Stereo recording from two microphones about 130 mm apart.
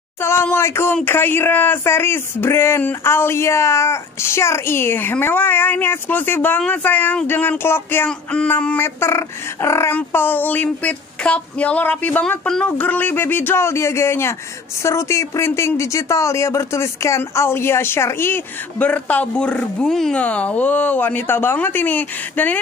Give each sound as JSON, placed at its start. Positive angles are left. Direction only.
{"t": 0.2, "sound": "speech", "side_deg": 20}